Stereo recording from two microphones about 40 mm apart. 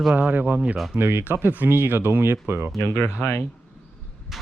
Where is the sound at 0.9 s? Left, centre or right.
Right.